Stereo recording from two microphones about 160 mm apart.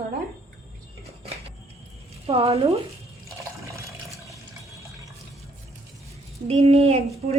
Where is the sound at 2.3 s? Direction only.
40° right (ahead or behind).